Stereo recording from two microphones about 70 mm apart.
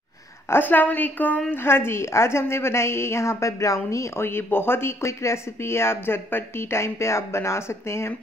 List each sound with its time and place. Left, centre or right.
0.5 s a woman's voice: left